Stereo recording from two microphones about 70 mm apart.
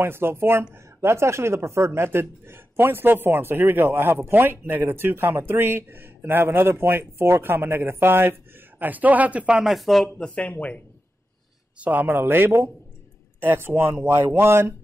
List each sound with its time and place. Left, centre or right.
0.0 s speech: right; by 9.8 s centre
9.8 s speech: centre
10.1 s speech: centre
11.8 s speech: right